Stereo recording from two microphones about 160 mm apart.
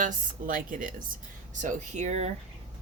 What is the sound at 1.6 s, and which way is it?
Speech, 45° right (ahead or behind).